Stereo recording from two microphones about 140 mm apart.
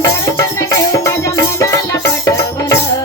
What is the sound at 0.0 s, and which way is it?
Music, 20° left (ahead or behind).